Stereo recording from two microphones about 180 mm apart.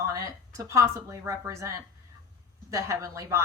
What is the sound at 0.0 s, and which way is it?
A woman's voice, 15° right (ahead or behind).